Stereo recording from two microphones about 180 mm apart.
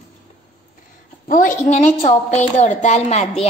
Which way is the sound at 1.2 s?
50° left (ahead or behind).